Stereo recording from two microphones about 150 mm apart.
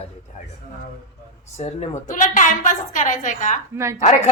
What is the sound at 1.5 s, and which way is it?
A woman's voice, 50° left (ahead or behind).